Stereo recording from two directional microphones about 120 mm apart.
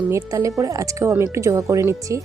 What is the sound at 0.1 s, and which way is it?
Speech, 25° right (ahead or behind).